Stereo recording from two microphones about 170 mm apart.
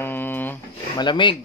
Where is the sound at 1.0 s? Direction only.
25° left (ahead or behind).